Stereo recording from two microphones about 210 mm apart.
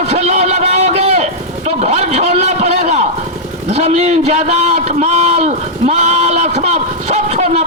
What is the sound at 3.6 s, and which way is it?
A man's voice, 30° right (ahead or behind).